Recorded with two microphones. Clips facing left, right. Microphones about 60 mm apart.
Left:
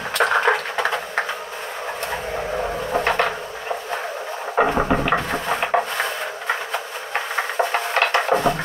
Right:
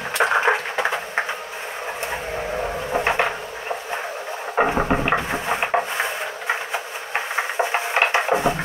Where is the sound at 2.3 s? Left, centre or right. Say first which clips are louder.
Left 1 dB; centre.